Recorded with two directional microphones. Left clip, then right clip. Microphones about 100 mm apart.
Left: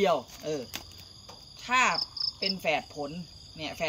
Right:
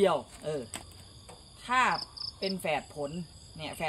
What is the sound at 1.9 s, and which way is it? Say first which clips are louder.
Cricket: left 2 dB; 40° left (ahead or behind).